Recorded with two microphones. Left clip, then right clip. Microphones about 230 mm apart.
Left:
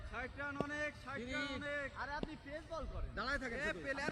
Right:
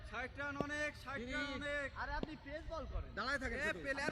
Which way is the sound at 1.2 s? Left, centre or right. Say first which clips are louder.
Left 1 dB; centre.